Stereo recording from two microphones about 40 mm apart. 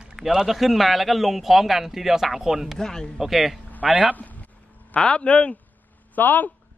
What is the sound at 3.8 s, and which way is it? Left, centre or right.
Speech, right.